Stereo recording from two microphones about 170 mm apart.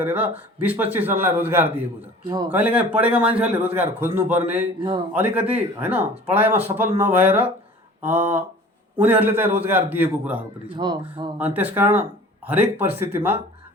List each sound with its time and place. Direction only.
0.0 s speech: 10° right (ahead or behind)
4.8 s a man's voice: 25° right (ahead or behind)
5.1 s speech: 10° right (ahead or behind)
10.8 s a man's voice: 25° right (ahead or behind)
11.3 s speech: 10° right (ahead or behind)